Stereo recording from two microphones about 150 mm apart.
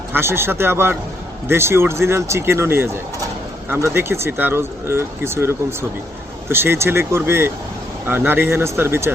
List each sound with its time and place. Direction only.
0.1 s speech: 15° right (ahead or behind)